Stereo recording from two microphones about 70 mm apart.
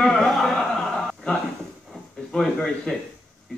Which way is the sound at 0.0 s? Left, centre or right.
Centre.